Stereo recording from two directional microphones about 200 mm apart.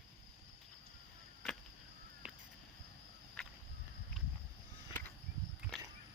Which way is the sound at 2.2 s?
5° right (ahead or behind).